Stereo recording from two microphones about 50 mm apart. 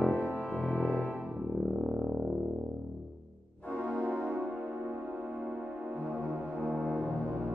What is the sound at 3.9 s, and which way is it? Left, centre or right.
Music, right.